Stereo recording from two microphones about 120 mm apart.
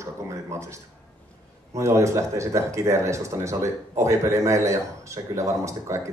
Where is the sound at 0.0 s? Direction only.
25° right (ahead or behind).